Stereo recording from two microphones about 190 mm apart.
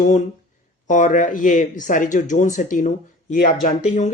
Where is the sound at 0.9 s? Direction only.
40° left (ahead or behind).